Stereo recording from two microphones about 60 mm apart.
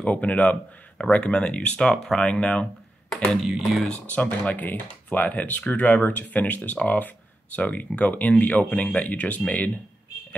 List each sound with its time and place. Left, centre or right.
0.0 s speech: left
3.3 s a sound: centre
4.1 s speech: left